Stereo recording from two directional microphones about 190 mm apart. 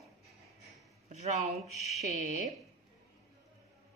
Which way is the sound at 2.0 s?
40° right (ahead or behind).